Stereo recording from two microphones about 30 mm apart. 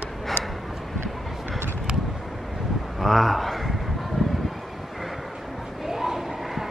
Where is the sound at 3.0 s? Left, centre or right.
Centre.